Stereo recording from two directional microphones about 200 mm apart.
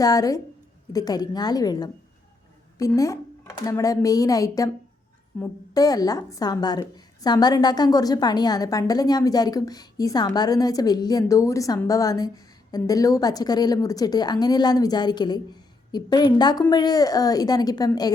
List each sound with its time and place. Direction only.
0.0 s a woman's voice: 20° left (ahead or behind)